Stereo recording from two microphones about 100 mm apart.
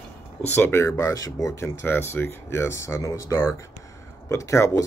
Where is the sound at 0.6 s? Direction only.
25° left (ahead or behind).